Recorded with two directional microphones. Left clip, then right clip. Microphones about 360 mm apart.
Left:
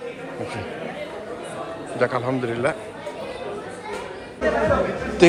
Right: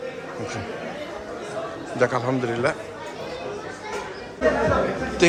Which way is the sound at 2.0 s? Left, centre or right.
Centre.